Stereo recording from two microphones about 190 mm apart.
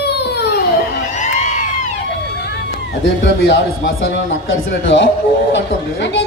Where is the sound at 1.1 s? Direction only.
40° left (ahead or behind).